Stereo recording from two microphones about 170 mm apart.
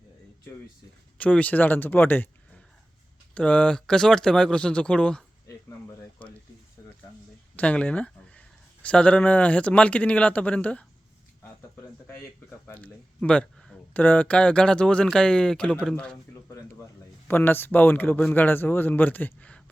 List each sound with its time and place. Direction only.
1.2 s a man's voice: 10° left (ahead or behind)
5.5 s a sound: 20° left (ahead or behind)
7.5 s speech: 5° left (ahead or behind)
12.0 s a man's voice: 15° left (ahead or behind)
17.2 s a man's voice: 10° left (ahead or behind)